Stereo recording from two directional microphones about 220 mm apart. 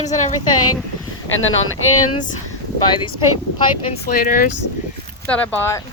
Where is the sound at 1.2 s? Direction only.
60° left (ahead or behind).